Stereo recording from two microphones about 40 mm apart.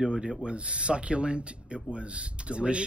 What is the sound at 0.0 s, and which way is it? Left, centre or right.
Speech, right.